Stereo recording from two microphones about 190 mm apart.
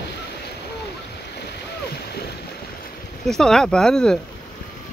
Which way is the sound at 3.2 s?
5° left (ahead or behind).